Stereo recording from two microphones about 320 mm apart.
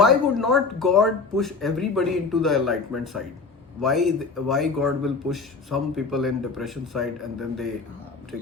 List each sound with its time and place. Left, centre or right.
0.0 s speech: centre